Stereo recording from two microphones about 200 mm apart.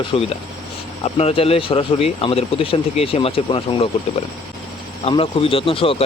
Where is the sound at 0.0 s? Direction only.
30° left (ahead or behind).